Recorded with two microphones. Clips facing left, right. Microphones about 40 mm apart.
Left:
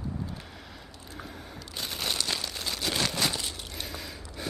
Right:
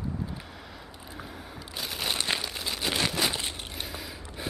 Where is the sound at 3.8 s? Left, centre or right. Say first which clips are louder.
Left 1 dB; centre.